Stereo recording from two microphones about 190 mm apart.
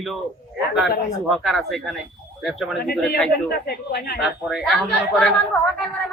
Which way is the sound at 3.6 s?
55° left (ahead or behind).